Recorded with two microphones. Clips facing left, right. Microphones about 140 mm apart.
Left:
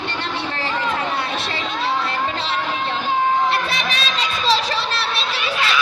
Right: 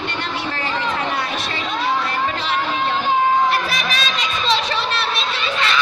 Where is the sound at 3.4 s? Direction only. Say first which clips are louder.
Right 1 dB; 30° left (ahead or behind).